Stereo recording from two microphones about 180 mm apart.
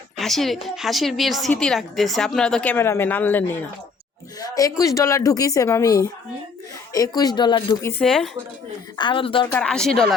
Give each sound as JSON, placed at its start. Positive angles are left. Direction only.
{"t": 0.2, "sound": "a woman's voice", "side_deg": 0}
{"t": 8.0, "sound": "a woman's voice", "side_deg": 5}
{"t": 9.0, "sound": "a woman's voice", "side_deg": 25}
{"t": 9.5, "sound": "a woman's voice", "side_deg": 5}